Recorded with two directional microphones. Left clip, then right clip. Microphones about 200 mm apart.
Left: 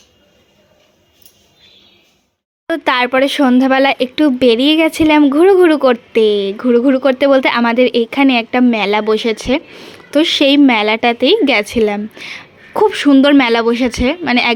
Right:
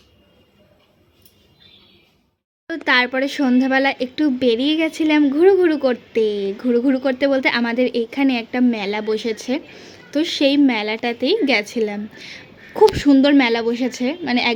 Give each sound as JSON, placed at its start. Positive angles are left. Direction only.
{"t": 2.6, "sound": "speech", "side_deg": 20}